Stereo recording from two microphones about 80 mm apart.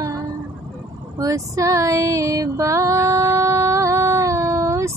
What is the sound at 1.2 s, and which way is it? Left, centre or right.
Music, right.